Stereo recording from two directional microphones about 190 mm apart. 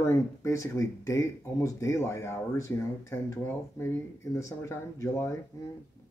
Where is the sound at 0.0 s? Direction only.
15° left (ahead or behind).